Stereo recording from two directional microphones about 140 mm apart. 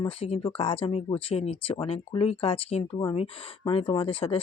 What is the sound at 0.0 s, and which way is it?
Speech, 45° left (ahead or behind).